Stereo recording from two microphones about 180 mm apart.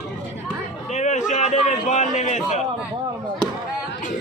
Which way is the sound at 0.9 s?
40° left (ahead or behind).